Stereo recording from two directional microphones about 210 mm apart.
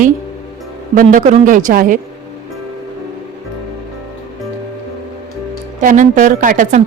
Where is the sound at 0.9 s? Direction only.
40° right (ahead or behind).